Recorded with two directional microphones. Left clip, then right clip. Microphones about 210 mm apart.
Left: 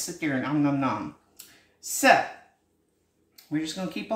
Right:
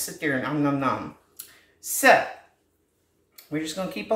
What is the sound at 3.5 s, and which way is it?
Speech, 15° right (ahead or behind).